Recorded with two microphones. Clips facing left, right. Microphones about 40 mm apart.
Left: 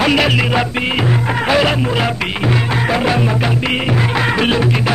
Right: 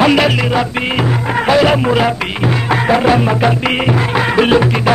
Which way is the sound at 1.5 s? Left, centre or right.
Centre.